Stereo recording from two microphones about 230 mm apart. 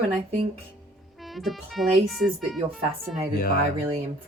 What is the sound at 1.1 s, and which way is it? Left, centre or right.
Speech, centre.